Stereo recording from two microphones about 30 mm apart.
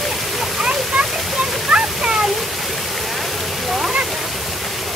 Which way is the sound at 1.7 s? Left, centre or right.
Right.